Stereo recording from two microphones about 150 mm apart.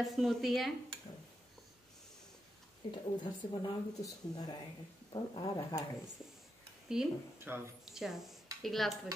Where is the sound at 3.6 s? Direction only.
25° left (ahead or behind).